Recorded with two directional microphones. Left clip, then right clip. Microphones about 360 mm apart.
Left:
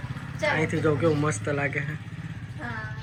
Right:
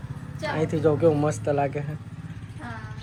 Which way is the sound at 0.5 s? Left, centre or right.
Centre.